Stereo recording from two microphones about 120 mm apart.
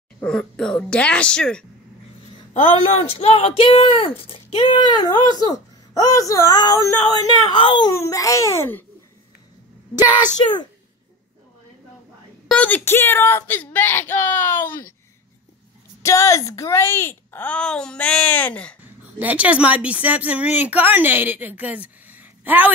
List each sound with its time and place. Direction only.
0.2 s speech: 5° left (ahead or behind)
2.5 s speech: 60° left (ahead or behind); by 7.5 s 30° left (ahead or behind)
7.5 s a child's voice: 45° left (ahead or behind)
7.9 s a child's voice: 25° left (ahead or behind)
12.4 s speech: 10° left (ahead or behind)
16.0 s speech: 25° left (ahead or behind); by 18.8 s 10° left (ahead or behind)
18.8 s speech: 10° right (ahead or behind)